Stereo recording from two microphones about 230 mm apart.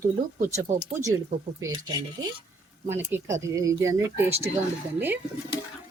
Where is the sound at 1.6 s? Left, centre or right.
Centre.